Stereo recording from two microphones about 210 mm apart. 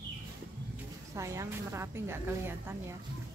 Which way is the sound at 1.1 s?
15° right (ahead or behind).